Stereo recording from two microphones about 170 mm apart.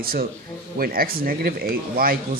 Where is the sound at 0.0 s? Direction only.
60° right (ahead or behind).